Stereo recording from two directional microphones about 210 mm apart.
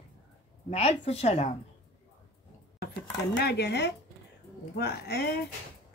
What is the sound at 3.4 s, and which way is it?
Speech, 50° left (ahead or behind).